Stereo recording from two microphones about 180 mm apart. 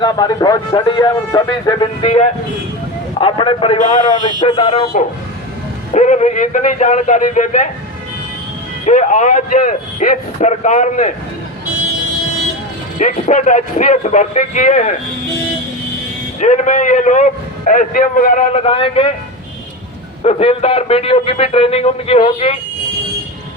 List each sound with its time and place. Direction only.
0.0 s speech: 25° left (ahead or behind)
2.0 s a man's voice: 35° left (ahead or behind)
8.9 s a man's voice: 45° left (ahead or behind)
13.0 s a man's voice: 45° left (ahead or behind)
16.4 s a man's voice: 45° left (ahead or behind)
18.5 s a man's voice: 30° left (ahead or behind)
20.2 s a man's voice: 35° left (ahead or behind)